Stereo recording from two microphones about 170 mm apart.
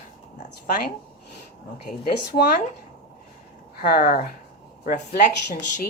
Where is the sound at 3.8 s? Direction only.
60° left (ahead or behind).